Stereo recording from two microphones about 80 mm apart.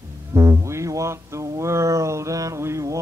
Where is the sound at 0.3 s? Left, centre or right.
Right.